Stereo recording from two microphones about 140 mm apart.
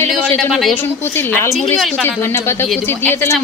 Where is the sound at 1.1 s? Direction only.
15° left (ahead or behind).